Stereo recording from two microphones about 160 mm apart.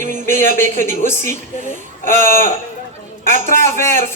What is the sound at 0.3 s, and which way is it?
Speech, 15° left (ahead or behind).